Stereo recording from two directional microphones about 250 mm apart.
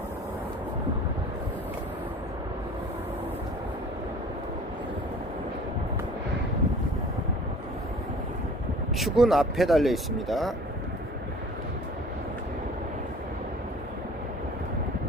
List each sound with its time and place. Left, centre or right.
9.0 s speech: centre